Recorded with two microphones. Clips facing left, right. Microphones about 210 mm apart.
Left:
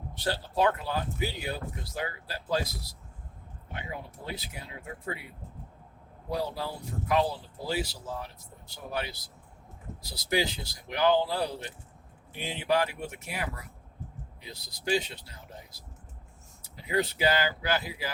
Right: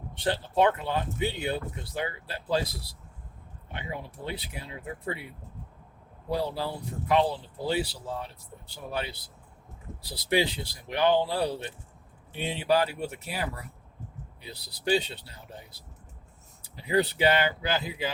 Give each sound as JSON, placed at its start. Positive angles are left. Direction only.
{"t": 0.2, "sound": "speech", "side_deg": -25}
{"t": 3.7, "sound": "speech", "side_deg": -30}
{"t": 6.2, "sound": "speech", "side_deg": -30}
{"t": 16.6, "sound": "speech", "side_deg": -30}